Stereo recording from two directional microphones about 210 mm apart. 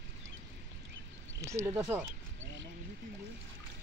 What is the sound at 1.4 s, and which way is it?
Speech, 15° right (ahead or behind).